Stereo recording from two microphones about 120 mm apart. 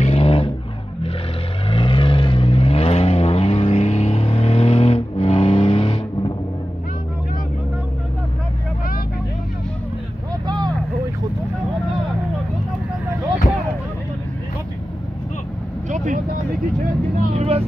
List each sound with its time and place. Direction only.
0.0 s vehicle: 55° left (ahead or behind)
1.7 s vehicle: 45° left (ahead or behind)
10.4 s vehicle: 35° right (ahead or behind)
15.9 s vehicle: 90° right
17.4 s vehicle: 55° right (ahead or behind)